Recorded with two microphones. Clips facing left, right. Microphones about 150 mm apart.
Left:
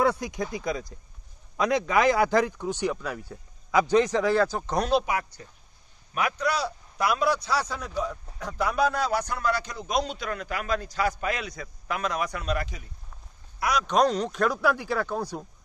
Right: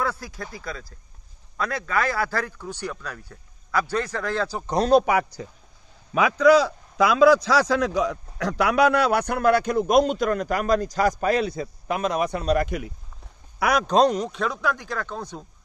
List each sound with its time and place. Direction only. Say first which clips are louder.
0.0 s speech: left 4 dB; 20° left (ahead or behind)
4.7 s speech: right 6 dB; 40° right (ahead or behind)
5.0 s speech: right 7 dB; 80° right
6.3 s a man's voice: right 11 dB; 90° right; by 12.4 s 25° right (ahead or behind)
12.6 s a man's voice: right 14 dB; 70° right (ahead or behind)
14.2 s speech: left 2 dB; centre (ahead or behind)